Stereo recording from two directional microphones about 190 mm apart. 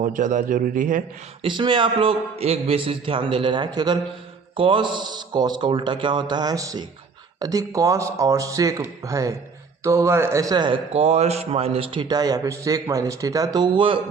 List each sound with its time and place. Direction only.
0.0 s a man's voice: 40° right (ahead or behind)
1.4 s a man's voice: 25° right (ahead or behind)